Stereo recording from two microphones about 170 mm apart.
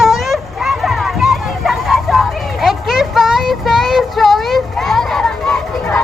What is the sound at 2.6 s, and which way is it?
Child singing, centre (ahead or behind).